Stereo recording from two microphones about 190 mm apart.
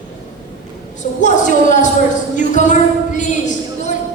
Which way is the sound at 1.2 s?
40° left (ahead or behind).